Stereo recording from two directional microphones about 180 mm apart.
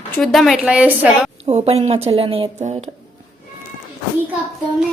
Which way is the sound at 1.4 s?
35° right (ahead or behind).